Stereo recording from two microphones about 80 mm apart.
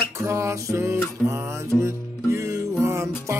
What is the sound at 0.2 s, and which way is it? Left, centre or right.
Music, right.